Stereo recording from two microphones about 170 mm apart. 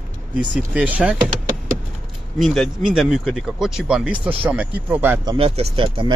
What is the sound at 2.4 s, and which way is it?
Speech, centre (ahead or behind).